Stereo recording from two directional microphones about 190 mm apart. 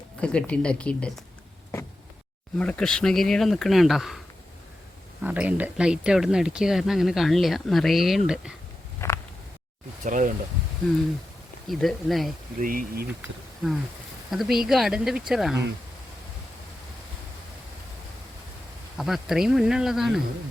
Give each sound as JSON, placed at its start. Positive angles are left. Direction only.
{"t": 0.2, "sound": "speech", "side_deg": 5}
{"t": 2.6, "sound": "speech", "side_deg": 5}
{"t": 5.2, "sound": "speech", "side_deg": -5}
{"t": 9.0, "sound": "a sound", "side_deg": 15}
{"t": 10.0, "sound": "speech", "side_deg": -45}
{"t": 11.7, "sound": "speech", "side_deg": 0}
{"t": 12.5, "sound": "speech", "side_deg": -45}
{"t": 14.3, "sound": "speech", "side_deg": 0}
{"t": 18.9, "sound": "speech", "side_deg": 0}